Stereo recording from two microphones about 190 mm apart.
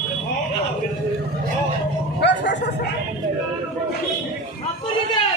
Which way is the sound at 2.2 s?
70° left (ahead or behind).